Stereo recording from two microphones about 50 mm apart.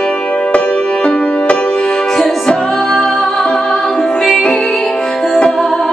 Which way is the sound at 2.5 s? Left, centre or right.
Centre.